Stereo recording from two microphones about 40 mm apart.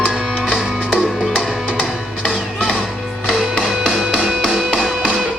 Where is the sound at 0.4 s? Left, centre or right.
Centre.